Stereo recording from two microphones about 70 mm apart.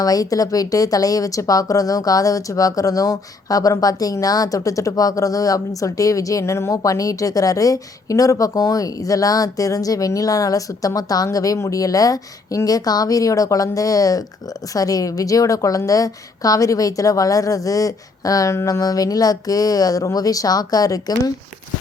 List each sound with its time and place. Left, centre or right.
0.0 s speech: left
6.8 s speech: left